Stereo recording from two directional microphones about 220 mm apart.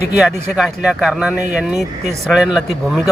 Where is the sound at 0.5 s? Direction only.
Centre (ahead or behind).